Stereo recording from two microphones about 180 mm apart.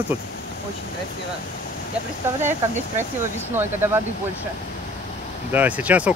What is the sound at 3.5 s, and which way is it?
Speech, 15° right (ahead or behind).